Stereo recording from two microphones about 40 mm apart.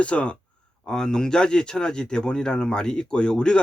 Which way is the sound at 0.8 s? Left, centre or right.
Centre.